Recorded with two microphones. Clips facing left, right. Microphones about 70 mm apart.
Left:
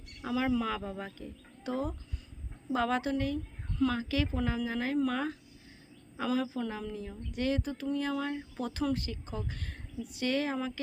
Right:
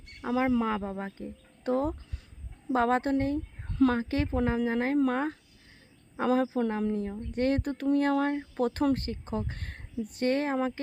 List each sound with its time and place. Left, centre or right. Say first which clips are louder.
0.1 s speech: right 4 dB; right
1.6 s speech: right 6 dB; right